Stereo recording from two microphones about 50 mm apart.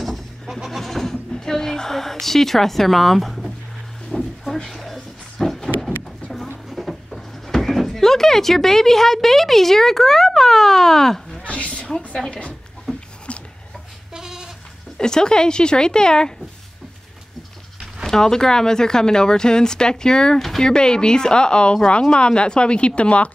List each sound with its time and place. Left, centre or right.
0.0 s goat: centre
1.3 s a sound: centre
6.7 s speech: centre
11.4 s a sound: left
12.3 s a woman's voice: left
12.9 s a sound: centre
14.1 s goat: centre
15.0 s speech: centre
18.0 s a woman's voice: centre